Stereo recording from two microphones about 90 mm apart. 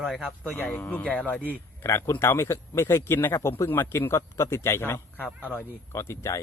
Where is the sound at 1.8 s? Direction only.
30° left (ahead or behind).